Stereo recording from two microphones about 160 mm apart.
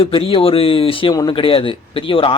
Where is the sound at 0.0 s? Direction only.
35° left (ahead or behind).